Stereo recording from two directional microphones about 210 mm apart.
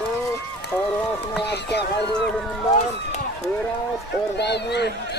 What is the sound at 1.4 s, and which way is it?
Speech, 50° left (ahead or behind).